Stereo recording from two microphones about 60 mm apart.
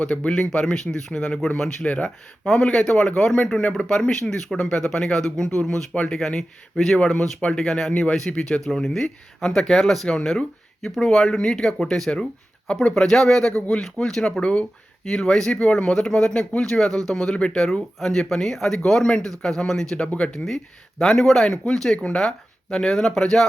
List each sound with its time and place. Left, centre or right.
0.0 s speech: centre
14.4 s speech: centre
15.0 s speech: centre
21.0 s speech: centre